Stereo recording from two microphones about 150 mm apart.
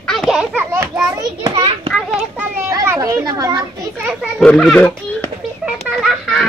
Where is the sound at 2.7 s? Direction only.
20° right (ahead or behind).